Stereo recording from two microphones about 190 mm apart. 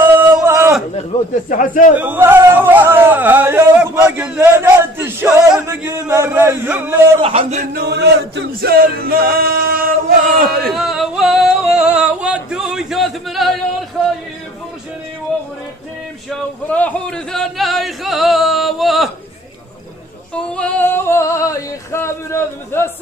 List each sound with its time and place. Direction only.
0.0 s a sound: 10° right (ahead or behind)
0.9 s a man's voice: 40° left (ahead or behind)
2.0 s speech: 10° right (ahead or behind)
7.2 s a man's voice: 30° right (ahead or behind)
7.7 s male singing: 60° right (ahead or behind)
10.7 s singing: centre (ahead or behind)
16.3 s speech: 10° left (ahead or behind)
20.3 s singing: 5° left (ahead or behind)